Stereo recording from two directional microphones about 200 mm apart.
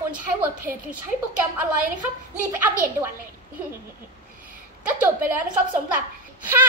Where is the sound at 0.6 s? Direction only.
45° right (ahead or behind).